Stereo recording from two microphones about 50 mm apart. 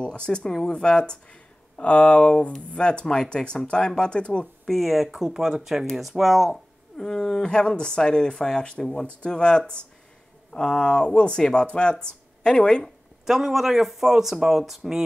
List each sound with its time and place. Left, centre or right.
0.0 s speech: centre
4.6 s speech: centre
13.2 s speech: centre